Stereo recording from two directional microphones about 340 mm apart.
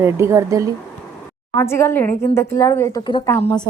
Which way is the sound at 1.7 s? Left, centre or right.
Centre.